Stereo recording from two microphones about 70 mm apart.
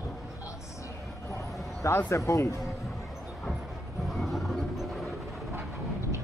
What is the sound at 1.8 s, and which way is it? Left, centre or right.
Speech, left.